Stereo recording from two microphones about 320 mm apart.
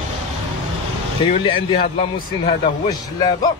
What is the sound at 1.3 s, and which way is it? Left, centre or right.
Speech, centre.